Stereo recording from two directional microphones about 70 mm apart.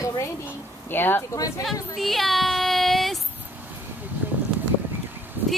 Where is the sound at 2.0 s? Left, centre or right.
Centre.